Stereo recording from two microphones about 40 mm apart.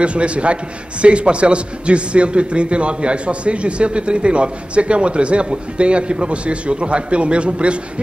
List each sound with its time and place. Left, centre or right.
0.0 s a man's voice: right